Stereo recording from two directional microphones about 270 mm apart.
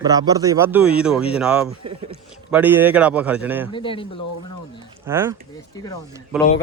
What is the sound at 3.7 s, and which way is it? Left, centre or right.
Speech, centre.